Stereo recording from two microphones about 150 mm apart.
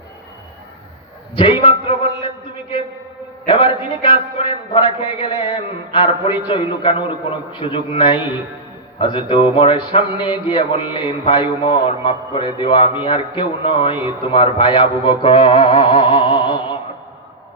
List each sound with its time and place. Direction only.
1.4 s a man's voice: 35° left (ahead or behind)
3.4 s a man's voice: 35° left (ahead or behind)